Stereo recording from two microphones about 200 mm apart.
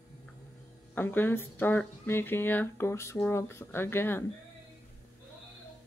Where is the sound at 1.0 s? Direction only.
10° left (ahead or behind).